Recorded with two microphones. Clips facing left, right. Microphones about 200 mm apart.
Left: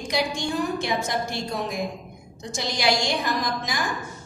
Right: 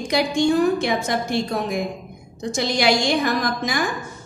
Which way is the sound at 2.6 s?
60° right (ahead or behind).